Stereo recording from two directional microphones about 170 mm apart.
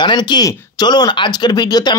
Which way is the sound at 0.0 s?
25° left (ahead or behind).